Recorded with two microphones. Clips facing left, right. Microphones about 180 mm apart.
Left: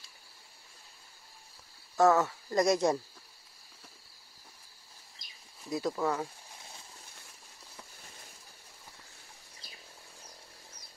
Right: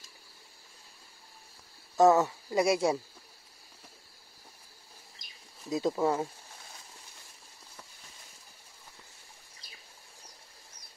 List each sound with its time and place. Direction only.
2.0 s speech: 20° right (ahead or behind)
5.7 s speech: 25° right (ahead or behind)